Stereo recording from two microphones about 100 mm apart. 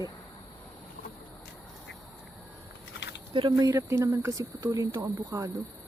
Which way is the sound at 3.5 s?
35° right (ahead or behind).